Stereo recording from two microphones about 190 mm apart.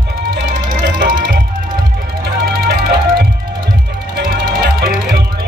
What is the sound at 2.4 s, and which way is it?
Music, 55° right (ahead or behind).